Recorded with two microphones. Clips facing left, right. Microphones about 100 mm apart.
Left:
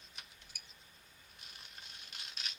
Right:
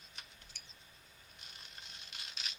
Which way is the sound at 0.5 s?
10° left (ahead or behind).